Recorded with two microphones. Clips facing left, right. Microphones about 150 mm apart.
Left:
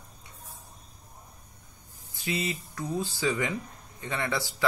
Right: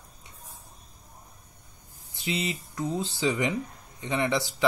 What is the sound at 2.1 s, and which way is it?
Speech, 20° right (ahead or behind).